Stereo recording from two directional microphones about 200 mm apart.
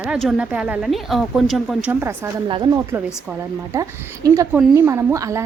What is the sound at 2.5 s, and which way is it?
A woman's voice, 25° right (ahead or behind).